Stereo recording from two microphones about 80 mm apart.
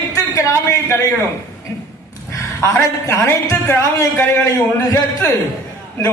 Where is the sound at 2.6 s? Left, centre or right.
Left.